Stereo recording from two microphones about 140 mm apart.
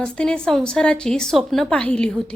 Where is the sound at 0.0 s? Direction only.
5° left (ahead or behind).